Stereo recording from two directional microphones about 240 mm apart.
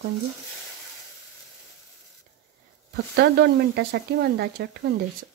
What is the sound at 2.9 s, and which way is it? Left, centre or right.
Speech, right.